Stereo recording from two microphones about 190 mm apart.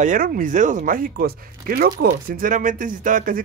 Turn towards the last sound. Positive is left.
turn(degrees=-45)  # may be behind; listen again after turning